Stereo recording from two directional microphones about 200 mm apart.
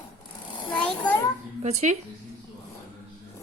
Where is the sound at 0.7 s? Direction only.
10° left (ahead or behind).